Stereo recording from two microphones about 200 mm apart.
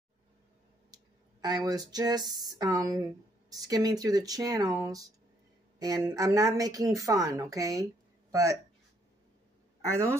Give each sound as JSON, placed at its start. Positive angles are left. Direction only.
{"t": 1.4, "sound": "speech", "side_deg": -20}